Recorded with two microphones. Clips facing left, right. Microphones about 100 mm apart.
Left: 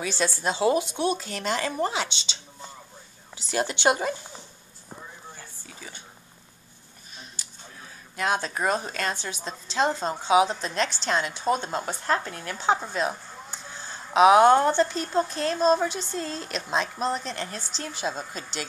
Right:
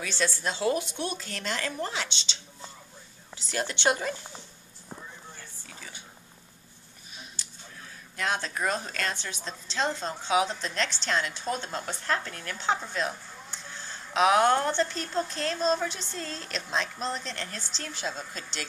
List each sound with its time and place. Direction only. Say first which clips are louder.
0.0 s a woman's voice: left 3 dB; 15° left (ahead or behind)
3.4 s a woman's voice: left 4 dB; 10° left (ahead or behind)
7.4 s a sound: left 1 dB; 5° left (ahead or behind)
8.2 s a woman's voice: left 4 dB; 10° left (ahead or behind)
13.5 s a sound: left 1 dB; 10° left (ahead or behind)
14.0 s a woman's voice: left 6 dB; 15° left (ahead or behind)